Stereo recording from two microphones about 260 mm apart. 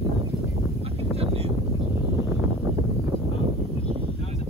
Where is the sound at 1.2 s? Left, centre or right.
Right.